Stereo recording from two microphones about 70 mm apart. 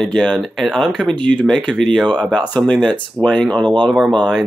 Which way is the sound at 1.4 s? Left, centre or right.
Centre.